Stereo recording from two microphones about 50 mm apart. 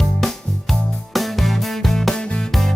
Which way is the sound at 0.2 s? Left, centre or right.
Centre.